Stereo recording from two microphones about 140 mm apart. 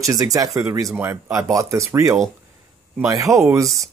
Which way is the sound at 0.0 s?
25° right (ahead or behind).